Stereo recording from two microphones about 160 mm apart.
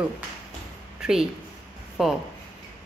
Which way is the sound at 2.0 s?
5° right (ahead or behind).